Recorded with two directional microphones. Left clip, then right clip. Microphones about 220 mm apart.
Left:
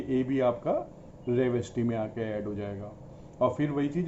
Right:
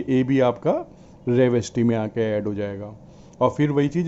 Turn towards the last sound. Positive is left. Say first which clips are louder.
# right 8 dB
turn(degrees=-50)  # may be behind; listen again after turning